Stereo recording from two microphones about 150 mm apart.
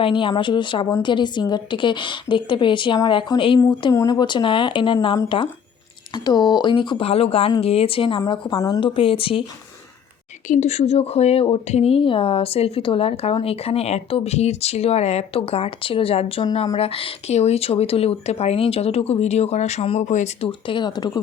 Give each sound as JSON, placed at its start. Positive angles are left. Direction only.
{"t": 0.0, "sound": "speech", "side_deg": 35}
{"t": 8.2, "sound": "speech", "side_deg": 25}
{"t": 8.8, "sound": "speech", "side_deg": 35}
{"t": 10.5, "sound": "speech", "side_deg": 50}
{"t": 20.5, "sound": "speech", "side_deg": 35}